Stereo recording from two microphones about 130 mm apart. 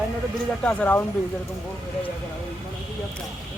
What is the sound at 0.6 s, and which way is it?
Speech, 15° left (ahead or behind).